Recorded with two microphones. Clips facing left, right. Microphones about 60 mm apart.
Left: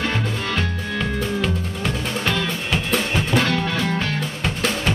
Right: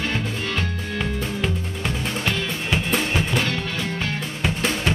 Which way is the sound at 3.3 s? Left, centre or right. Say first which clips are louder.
Left 4 dB; left.